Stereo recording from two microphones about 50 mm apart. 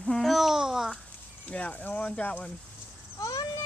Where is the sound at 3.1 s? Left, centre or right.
Left.